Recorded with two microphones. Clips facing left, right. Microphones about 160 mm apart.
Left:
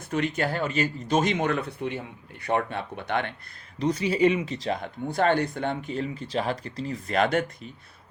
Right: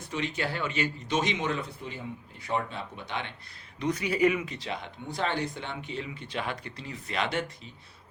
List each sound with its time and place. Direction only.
0.1 s speech: 50° left (ahead or behind)
3.8 s speech: 30° left (ahead or behind); by 7.5 s 50° left (ahead or behind)